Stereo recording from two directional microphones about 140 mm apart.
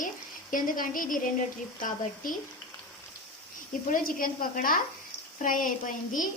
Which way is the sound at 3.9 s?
85° left.